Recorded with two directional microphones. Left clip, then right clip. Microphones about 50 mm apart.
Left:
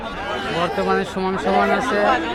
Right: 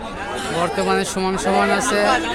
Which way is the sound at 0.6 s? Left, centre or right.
Right.